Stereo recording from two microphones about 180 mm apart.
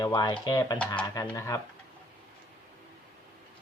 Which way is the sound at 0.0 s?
25° left (ahead or behind).